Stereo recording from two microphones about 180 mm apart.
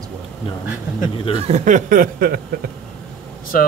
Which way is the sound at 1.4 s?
40° right (ahead or behind).